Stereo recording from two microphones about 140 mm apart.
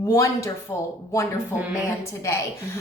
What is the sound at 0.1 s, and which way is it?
Speech, 20° left (ahead or behind).